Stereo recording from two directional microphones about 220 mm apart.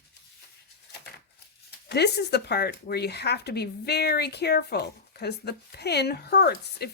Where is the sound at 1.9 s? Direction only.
50° left (ahead or behind).